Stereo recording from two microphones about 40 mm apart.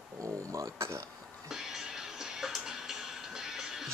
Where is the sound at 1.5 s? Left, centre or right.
Centre.